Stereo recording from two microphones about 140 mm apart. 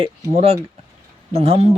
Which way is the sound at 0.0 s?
45° right (ahead or behind).